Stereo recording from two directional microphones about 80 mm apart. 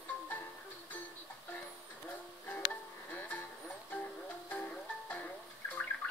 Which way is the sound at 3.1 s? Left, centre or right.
Left.